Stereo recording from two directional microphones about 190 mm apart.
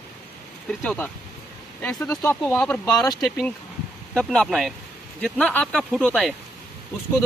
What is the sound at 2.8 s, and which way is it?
Speech, 20° left (ahead or behind).